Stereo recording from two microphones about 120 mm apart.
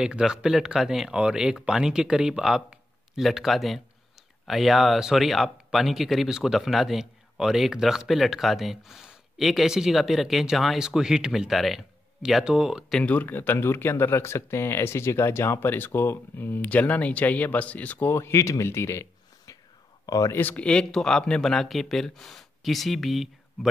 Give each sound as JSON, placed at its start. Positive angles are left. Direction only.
{"t": 0.0, "sound": "speech", "side_deg": -5}
{"t": 13.0, "sound": "speech", "side_deg": 15}
{"t": 20.3, "sound": "speech", "side_deg": 15}